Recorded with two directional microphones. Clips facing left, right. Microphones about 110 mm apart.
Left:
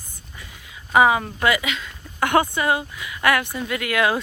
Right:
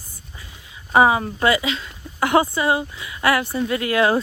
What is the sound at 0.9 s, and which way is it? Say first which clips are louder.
Speech: right 1 dB; 30° right (ahead or behind).